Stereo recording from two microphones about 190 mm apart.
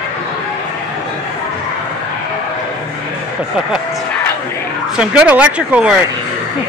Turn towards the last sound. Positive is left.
turn(degrees=-5)  # may be behind; listen again after turning